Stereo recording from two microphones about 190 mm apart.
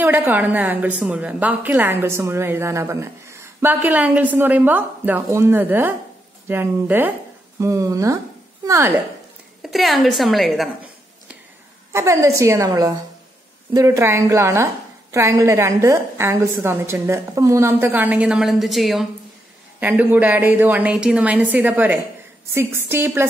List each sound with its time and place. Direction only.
0.0 s a woman's voice: 10° right (ahead or behind)
9.6 s a woman's voice: centre (ahead or behind)
11.9 s a woman's voice: 15° right (ahead or behind)